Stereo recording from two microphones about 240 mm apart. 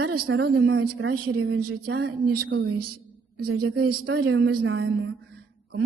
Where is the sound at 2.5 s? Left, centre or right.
Right.